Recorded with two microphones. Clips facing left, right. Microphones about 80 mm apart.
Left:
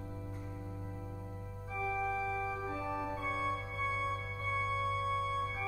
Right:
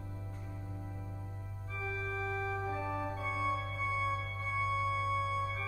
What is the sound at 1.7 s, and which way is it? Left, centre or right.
Organ, centre.